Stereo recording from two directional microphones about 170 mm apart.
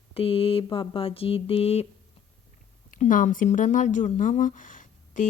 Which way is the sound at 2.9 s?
50° left (ahead or behind).